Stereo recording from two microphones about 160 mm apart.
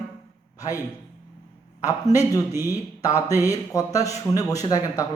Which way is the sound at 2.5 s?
15° right (ahead or behind).